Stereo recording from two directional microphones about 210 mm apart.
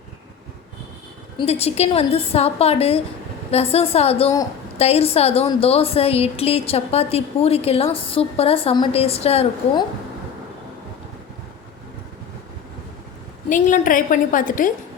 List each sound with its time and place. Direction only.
1.4 s a woman's voice: 30° left (ahead or behind)
13.5 s a woman's voice: 35° left (ahead or behind)